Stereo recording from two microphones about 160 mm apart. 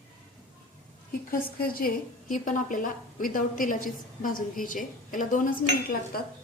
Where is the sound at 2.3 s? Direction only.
55° left (ahead or behind).